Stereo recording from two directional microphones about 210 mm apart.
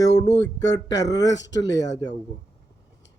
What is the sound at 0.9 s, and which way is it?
Speech, 15° left (ahead or behind).